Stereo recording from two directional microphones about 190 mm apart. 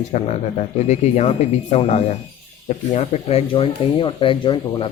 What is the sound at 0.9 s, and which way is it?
Speech, 35° left (ahead or behind).